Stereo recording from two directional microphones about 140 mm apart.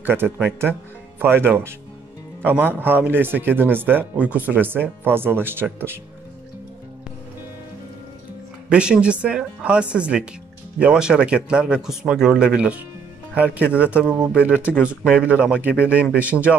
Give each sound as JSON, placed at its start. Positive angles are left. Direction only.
{"t": 0.0, "sound": "speech", "side_deg": -15}
{"t": 8.6, "sound": "speech", "side_deg": -5}